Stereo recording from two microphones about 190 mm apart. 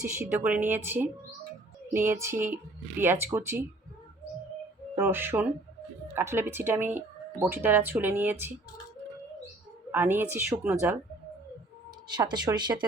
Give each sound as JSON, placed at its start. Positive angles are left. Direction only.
{"t": 0.2, "sound": "speech", "side_deg": -10}
{"t": 4.9, "sound": "speech", "side_deg": -10}
{"t": 9.9, "sound": "speech", "side_deg": -10}
{"t": 12.0, "sound": "speech", "side_deg": -20}